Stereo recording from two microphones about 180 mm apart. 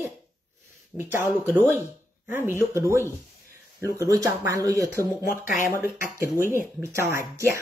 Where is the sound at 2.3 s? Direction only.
15° right (ahead or behind).